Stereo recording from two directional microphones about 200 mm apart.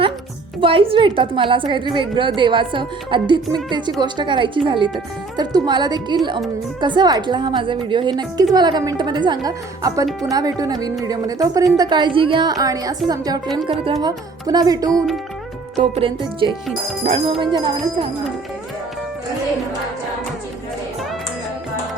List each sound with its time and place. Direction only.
0.6 s a woman's voice: 25° right (ahead or behind)
10.1 s speech: centre (ahead or behind)
10.3 s a woman's voice: 20° right (ahead or behind)
14.8 s speech: centre (ahead or behind)
15.8 s a woman's voice: 25° right (ahead or behind)